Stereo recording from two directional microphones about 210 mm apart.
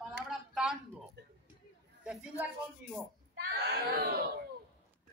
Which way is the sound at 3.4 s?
50° right (ahead or behind).